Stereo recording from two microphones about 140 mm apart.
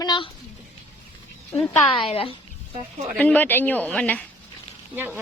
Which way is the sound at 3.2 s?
10° left (ahead or behind).